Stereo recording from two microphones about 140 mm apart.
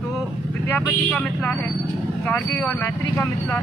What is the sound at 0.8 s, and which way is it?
Speech, 10° left (ahead or behind).